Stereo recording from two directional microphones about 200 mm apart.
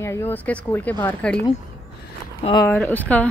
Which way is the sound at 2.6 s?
10° left (ahead or behind).